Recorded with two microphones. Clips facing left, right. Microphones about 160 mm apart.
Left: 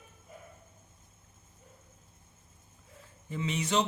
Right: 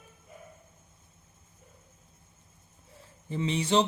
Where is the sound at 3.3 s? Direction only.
30° right (ahead or behind).